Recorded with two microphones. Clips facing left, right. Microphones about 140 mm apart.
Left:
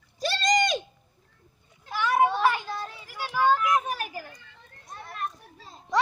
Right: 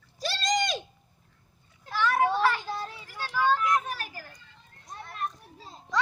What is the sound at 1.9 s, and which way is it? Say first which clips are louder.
Children playing: left 2 dB; 10° left (ahead or behind).